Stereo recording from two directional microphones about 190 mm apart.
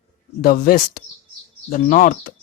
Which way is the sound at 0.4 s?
50° left (ahead or behind).